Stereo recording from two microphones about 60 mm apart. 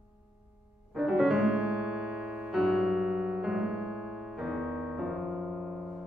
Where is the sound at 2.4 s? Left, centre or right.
Centre.